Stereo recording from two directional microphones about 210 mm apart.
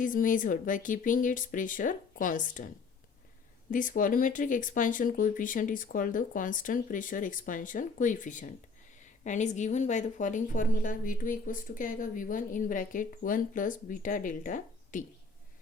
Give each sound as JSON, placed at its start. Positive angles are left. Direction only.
{"t": 0.0, "sound": "a woman's voice", "side_deg": 40}
{"t": 3.7, "sound": "a woman's voice", "side_deg": 40}